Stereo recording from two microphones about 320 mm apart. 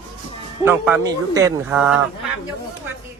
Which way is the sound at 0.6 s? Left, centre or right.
Centre.